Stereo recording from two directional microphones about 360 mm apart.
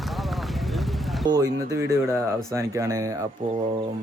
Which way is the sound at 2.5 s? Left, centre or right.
Centre.